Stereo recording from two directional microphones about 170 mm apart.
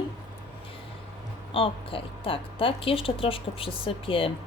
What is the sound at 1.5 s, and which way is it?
Speech, 30° left (ahead or behind).